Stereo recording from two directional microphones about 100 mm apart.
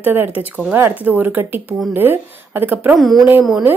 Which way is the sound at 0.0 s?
20° right (ahead or behind).